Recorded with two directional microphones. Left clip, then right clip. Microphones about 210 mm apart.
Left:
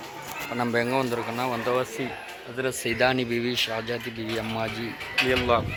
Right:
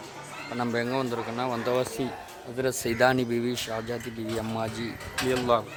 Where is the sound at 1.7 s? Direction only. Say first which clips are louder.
Left 1 dB; 25° right (ahead or behind).